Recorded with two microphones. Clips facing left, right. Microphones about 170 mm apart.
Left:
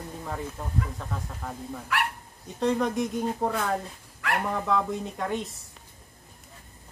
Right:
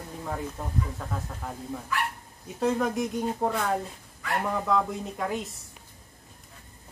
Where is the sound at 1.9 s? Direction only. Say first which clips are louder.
Left 2 dB; 75° left (ahead or behind).